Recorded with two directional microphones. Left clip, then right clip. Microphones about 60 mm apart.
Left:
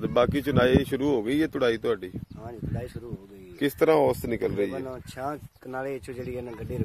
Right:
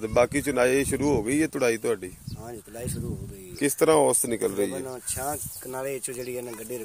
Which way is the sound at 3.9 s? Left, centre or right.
Centre.